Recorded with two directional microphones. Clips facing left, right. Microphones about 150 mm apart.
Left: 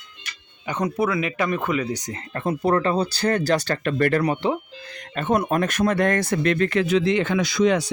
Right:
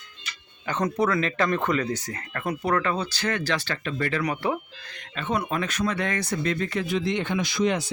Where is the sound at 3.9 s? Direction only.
55° left (ahead or behind).